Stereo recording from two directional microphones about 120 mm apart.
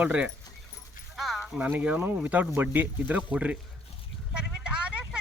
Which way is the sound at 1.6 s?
15° right (ahead or behind).